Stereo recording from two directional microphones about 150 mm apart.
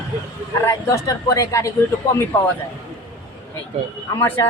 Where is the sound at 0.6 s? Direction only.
20° left (ahead or behind).